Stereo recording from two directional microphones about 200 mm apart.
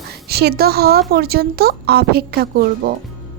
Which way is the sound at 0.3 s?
55° right (ahead or behind).